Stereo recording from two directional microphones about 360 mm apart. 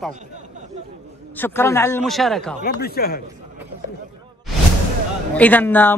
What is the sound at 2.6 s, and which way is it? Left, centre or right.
Speech, left.